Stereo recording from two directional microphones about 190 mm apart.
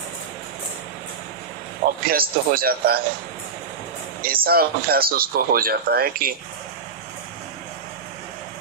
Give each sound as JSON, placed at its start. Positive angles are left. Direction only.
{"t": 2.0, "sound": "speech", "side_deg": -50}
{"t": 4.2, "sound": "speech", "side_deg": -50}